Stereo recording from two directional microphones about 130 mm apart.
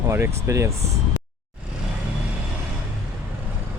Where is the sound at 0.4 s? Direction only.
25° right (ahead or behind).